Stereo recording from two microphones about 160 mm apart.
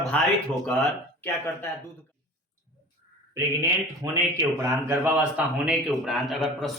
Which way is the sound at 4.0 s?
20° right (ahead or behind).